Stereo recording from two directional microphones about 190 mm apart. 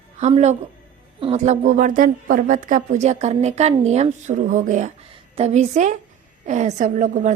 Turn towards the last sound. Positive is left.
turn(degrees=-40)  # may be behind; listen again after turning